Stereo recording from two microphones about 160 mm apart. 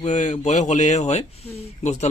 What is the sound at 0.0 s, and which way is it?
A man's voice, 45° left (ahead or behind).